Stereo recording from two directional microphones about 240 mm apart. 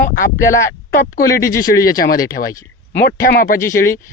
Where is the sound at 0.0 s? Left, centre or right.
Left.